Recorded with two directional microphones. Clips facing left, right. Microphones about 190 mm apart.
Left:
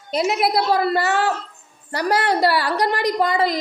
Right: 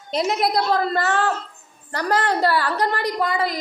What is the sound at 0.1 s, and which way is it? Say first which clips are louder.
A child's voice: left 1 dB; 5° left (ahead or behind).